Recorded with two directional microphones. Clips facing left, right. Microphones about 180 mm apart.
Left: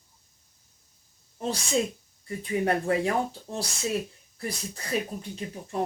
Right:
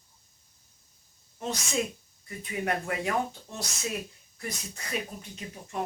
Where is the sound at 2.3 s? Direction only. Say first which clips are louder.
Left 5 dB; 30° left (ahead or behind).